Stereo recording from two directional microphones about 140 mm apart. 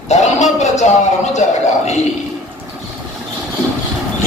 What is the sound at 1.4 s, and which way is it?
Speech, 55° left (ahead or behind).